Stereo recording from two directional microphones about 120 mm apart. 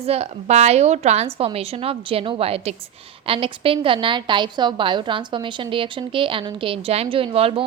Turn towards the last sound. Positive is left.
turn(degrees=-50)  # may be behind; listen again after turning